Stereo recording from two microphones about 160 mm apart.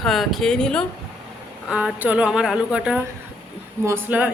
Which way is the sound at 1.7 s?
5° right (ahead or behind).